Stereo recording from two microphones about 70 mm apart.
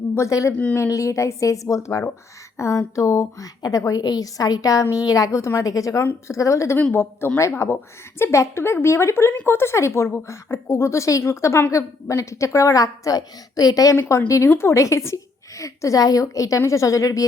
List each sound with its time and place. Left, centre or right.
0.1 s a woman's voice: left
6.9 s a woman's voice: left
13.9 s speech: left
14.3 s a woman's voice: left